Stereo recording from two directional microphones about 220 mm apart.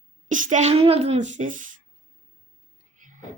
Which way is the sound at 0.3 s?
35° right (ahead or behind).